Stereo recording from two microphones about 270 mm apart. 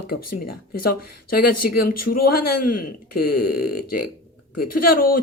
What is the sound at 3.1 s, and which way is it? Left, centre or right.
Speech, left.